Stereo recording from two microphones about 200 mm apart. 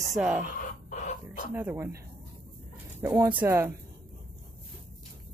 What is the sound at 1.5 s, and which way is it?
Speech, 10° right (ahead or behind).